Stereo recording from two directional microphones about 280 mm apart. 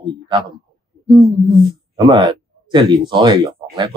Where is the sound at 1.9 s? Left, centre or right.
Centre.